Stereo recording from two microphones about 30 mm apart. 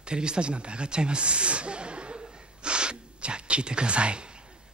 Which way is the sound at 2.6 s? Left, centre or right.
Right.